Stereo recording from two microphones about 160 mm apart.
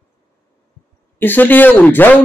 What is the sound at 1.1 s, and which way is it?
Speech, 10° left (ahead or behind).